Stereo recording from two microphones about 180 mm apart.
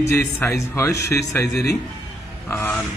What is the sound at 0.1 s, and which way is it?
A man's voice, 15° left (ahead or behind).